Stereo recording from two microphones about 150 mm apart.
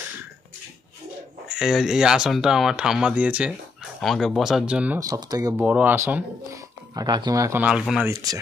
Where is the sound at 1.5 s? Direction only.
Centre (ahead or behind).